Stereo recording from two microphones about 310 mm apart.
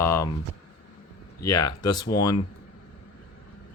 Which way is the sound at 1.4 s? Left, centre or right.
Centre.